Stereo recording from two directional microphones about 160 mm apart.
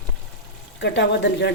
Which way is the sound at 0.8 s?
90° left.